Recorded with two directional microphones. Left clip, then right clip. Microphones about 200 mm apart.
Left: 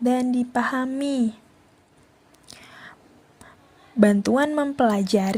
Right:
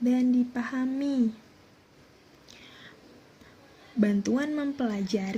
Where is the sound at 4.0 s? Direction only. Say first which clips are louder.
Left 9 dB; 40° left (ahead or behind).